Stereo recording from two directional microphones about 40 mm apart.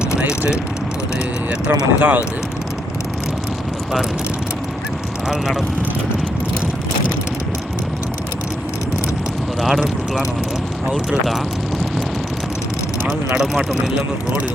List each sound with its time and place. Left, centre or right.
0.3 s speech: centre
1.5 s speech: right
5.3 s speech: centre
9.6 s speech: centre